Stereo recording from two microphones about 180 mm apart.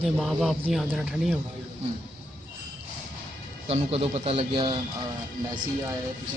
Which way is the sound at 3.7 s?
35° right (ahead or behind).